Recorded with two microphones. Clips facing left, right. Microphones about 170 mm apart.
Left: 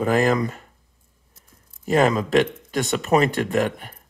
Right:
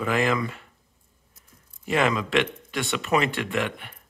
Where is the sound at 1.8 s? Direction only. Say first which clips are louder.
Left 5 dB; 40° left (ahead or behind).